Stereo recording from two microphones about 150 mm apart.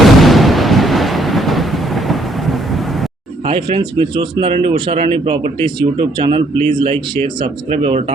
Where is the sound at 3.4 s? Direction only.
40° right (ahead or behind).